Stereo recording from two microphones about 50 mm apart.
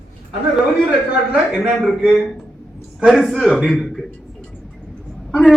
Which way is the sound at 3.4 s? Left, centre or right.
Centre.